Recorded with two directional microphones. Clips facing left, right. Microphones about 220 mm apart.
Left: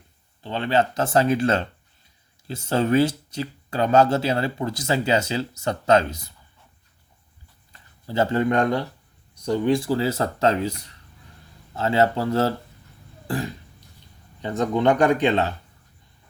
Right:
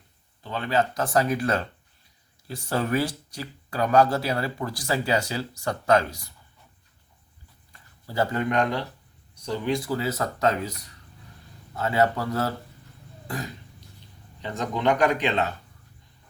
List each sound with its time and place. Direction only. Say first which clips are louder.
0.4 s speech: left 3 dB; 25° left (ahead or behind)
7.7 s a sound: left 7 dB; 25° left (ahead or behind)
9.4 s speech: left 6 dB; 30° left (ahead or behind)
13.2 s throat clearing: left 6 dB; 30° left (ahead or behind)
14.4 s speech: left 5 dB; 30° left (ahead or behind)